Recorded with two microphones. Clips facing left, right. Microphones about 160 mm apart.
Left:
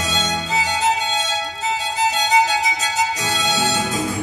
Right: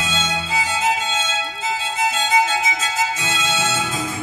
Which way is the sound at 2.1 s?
40° left (ahead or behind).